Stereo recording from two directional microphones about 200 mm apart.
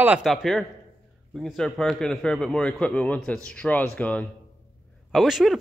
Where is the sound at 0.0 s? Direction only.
5° right (ahead or behind).